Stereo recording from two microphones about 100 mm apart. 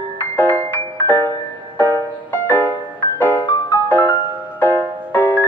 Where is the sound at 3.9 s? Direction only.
20° left (ahead or behind).